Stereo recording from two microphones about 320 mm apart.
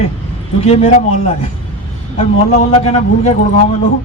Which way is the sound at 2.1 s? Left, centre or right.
Centre.